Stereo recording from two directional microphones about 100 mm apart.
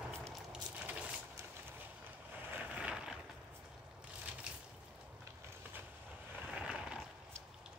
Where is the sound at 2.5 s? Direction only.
15° right (ahead or behind).